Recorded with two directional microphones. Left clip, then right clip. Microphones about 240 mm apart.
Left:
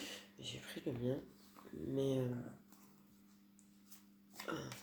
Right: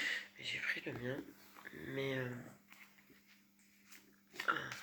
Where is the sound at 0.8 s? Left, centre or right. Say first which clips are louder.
Left 2 dB; centre.